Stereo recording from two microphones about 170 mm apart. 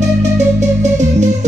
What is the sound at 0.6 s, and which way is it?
Music, 45° right (ahead or behind).